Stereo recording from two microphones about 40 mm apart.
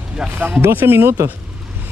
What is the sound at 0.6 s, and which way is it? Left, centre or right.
Speech, right.